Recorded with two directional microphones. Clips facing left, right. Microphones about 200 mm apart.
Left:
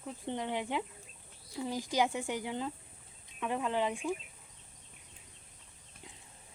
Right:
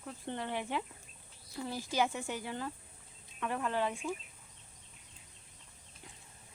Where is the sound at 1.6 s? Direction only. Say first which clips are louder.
Left 2 dB; 15° left (ahead or behind).